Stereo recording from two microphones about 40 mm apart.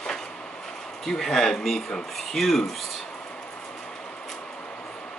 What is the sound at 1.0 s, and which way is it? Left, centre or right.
Speech, centre.